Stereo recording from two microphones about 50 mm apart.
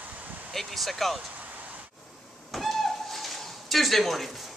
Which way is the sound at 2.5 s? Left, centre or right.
Centre.